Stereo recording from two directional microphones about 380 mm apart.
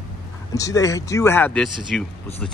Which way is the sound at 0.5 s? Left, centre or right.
Centre.